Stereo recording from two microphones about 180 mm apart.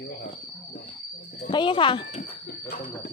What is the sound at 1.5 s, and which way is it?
Speech, 25° left (ahead or behind).